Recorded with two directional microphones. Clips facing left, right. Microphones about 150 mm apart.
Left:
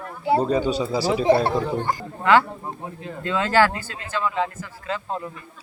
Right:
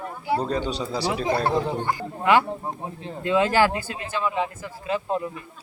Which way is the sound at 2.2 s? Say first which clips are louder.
Left 2 dB; 15° right (ahead or behind).